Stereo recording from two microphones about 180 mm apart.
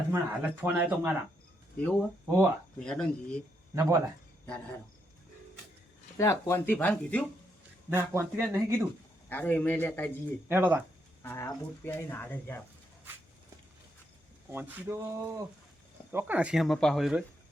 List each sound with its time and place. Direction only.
0.1 s speech: 10° right (ahead or behind)
1.8 s speech: 10° left (ahead or behind)
3.8 s speech: 15° right (ahead or behind)
6.1 s speech: 15° left (ahead or behind)
7.9 s speech: 15° right (ahead or behind)
9.3 s speech: 10° left (ahead or behind)
10.5 s speech: 10° right (ahead or behind)
11.2 s speech: 15° left (ahead or behind)
14.5 s speech: 10° right (ahead or behind)